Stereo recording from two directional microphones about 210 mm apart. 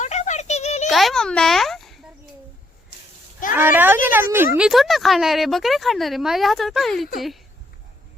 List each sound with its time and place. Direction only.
0.0 s a sound: 35° left (ahead or behind)
0.9 s a child's voice: centre (ahead or behind)
3.5 s speech: 10° right (ahead or behind)